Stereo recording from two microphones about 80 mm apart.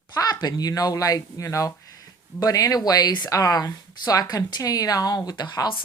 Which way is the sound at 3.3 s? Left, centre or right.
Left.